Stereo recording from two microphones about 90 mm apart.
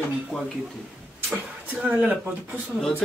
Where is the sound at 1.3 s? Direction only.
20° right (ahead or behind).